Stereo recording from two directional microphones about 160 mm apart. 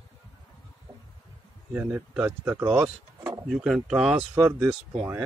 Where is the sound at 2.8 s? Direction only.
5° right (ahead or behind).